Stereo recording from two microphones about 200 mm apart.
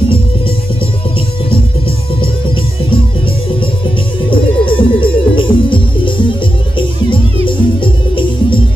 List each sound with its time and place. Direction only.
4.3 s music: 25° left (ahead or behind)
7.4 s music: 25° left (ahead or behind)